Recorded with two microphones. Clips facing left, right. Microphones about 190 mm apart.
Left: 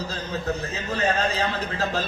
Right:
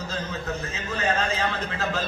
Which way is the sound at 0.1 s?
35° left (ahead or behind).